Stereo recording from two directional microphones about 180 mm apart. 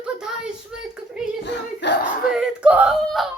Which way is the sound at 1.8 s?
75° left (ahead or behind).